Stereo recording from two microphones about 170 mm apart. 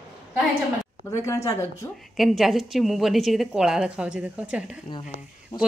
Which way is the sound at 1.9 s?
Centre (ahead or behind).